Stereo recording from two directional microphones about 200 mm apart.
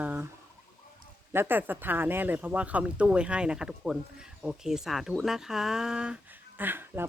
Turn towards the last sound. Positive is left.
turn(degrees=-10)  # may be behind; listen again after turning